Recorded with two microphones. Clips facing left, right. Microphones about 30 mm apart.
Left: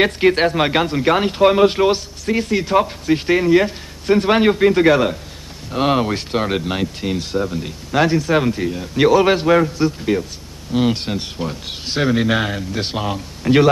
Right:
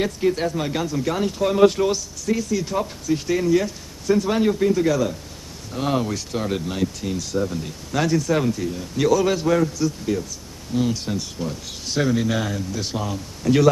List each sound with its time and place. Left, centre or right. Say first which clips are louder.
0.0 s a man's voice: left 7 dB; left
5.7 s speech: left 6 dB; left